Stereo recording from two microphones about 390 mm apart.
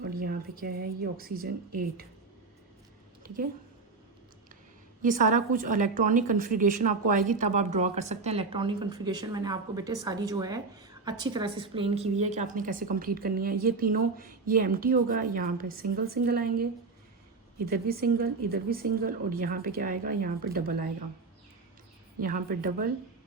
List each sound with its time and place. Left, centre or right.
0.0 s a sound: right
0.6 s a woman's voice: right
5.0 s a woman's voice: centre
17.7 s a woman's voice: right
22.2 s a woman's voice: right